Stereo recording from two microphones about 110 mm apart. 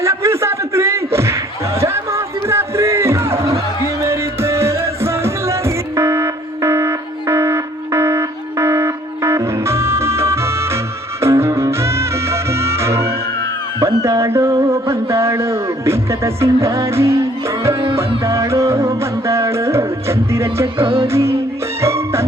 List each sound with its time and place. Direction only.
0.0 s a sound: 25° right (ahead or behind)
4.0 s music: 25° right (ahead or behind)
18.3 s music: 25° right (ahead or behind)
20.8 s music: 55° right (ahead or behind)
21.1 s music: 25° right (ahead or behind)